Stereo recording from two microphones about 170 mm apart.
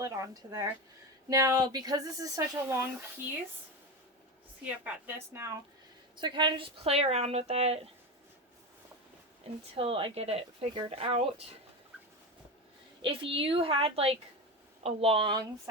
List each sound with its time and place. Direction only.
0.0 s speech: 20° right (ahead or behind)
4.6 s a woman's voice: 10° right (ahead or behind)
6.1 s speech: 25° right (ahead or behind)
9.7 s speech: 35° right (ahead or behind)
13.0 s speech: 30° right (ahead or behind)